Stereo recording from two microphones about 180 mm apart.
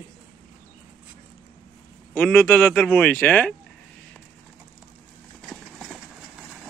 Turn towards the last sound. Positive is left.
turn(degrees=-5)  # may be behind; listen again after turning